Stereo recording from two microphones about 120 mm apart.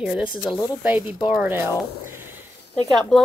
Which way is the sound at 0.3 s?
Centre (ahead or behind).